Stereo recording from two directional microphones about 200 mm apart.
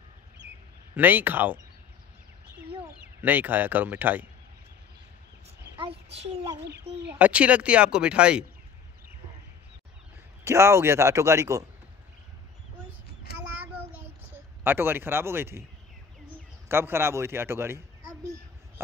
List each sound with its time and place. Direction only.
0.4 s a sound: 10° right (ahead or behind)
0.9 s speech: 10° right (ahead or behind)
3.2 s speech: 10° right (ahead or behind)
5.8 s a sound: 30° right (ahead or behind)
6.6 s speech: 60° right (ahead or behind)
7.1 s speech: 5° right (ahead or behind)
10.4 s speech: 15° right (ahead or behind)
14.6 s speech: 10° right (ahead or behind)
16.6 s speech: 10° right (ahead or behind)